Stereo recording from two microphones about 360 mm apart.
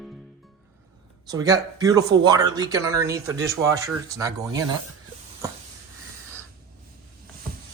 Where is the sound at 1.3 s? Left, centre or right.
Centre.